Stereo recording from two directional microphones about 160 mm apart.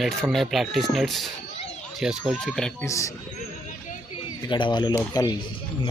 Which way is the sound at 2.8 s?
20° left (ahead or behind).